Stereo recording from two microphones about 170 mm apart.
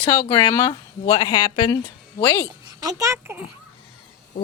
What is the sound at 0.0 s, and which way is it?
Speech, 20° left (ahead or behind).